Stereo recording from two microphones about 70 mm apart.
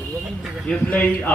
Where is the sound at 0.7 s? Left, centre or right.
Centre.